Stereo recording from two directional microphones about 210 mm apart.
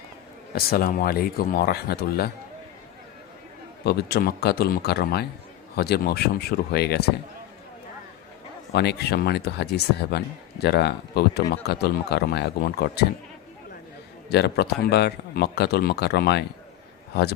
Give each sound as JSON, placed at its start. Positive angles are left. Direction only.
{"t": 0.5, "sound": "speech", "side_deg": 45}
{"t": 3.8, "sound": "speech", "side_deg": 50}
{"t": 8.7, "sound": "speech", "side_deg": 50}
{"t": 14.3, "sound": "speech", "side_deg": 50}